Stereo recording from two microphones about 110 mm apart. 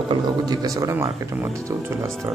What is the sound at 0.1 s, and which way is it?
Speech, 35° right (ahead or behind).